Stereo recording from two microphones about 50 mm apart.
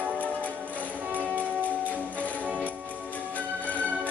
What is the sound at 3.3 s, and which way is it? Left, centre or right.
Music, left.